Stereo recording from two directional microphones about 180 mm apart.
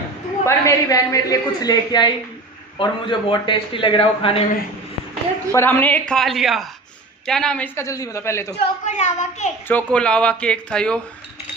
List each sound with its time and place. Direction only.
0.5 s a woman's voice: 15° left (ahead or behind)
5.5 s a man's voice: 10° left (ahead or behind)
8.8 s a woman's voice: 40° left (ahead or behind)
9.7 s speech: 10° left (ahead or behind)